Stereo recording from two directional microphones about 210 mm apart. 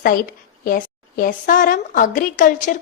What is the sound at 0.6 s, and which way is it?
A woman's voice, 45° left (ahead or behind).